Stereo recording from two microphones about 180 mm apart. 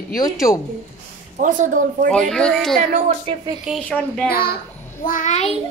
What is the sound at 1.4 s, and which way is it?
Speech, 45° right (ahead or behind).